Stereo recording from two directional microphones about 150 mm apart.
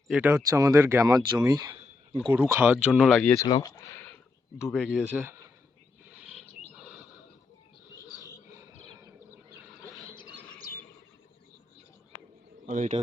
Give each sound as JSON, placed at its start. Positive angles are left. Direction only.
{"t": 0.1, "sound": "speech", "side_deg": -15}
{"t": 2.3, "sound": "speech", "side_deg": -15}
{"t": 3.4, "sound": "speech", "side_deg": 25}
{"t": 4.5, "sound": "speech", "side_deg": 0}
{"t": 5.1, "sound": "speech", "side_deg": -15}
{"t": 6.7, "sound": "neigh", "side_deg": -10}
{"t": 9.3, "sound": "a sound", "side_deg": -20}
{"t": 10.3, "sound": "chirp", "side_deg": 10}
{"t": 12.6, "sound": "a man's voice", "side_deg": -55}